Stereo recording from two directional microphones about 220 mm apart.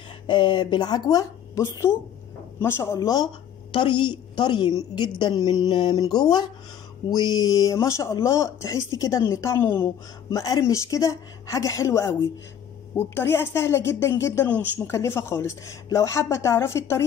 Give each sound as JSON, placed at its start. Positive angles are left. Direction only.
{"t": 0.3, "sound": "a woman's voice", "side_deg": 20}